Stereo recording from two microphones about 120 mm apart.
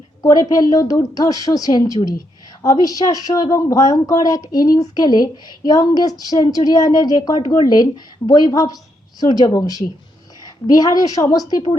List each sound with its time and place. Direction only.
0.2 s a woman's voice: 30° left (ahead or behind)